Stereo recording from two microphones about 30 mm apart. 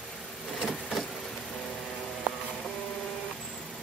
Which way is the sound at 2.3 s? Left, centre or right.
Right.